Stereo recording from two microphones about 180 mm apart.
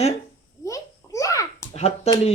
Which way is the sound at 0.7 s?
20° left (ahead or behind).